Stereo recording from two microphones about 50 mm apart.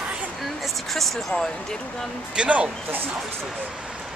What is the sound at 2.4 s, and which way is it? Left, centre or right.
Speech, centre.